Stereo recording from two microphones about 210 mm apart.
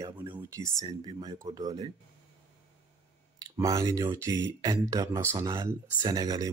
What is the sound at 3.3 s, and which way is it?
Speech, 15° right (ahead or behind).